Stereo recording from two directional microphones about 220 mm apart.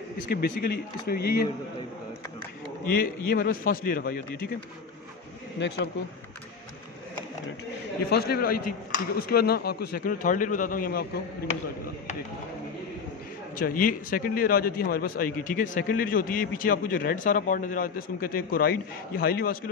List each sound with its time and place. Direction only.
0.3 s speech: 45° left (ahead or behind)
3.3 s a man's voice: 40° left (ahead or behind)
8.1 s speech: 45° left (ahead or behind)
13.6 s a man's voice: 40° left (ahead or behind)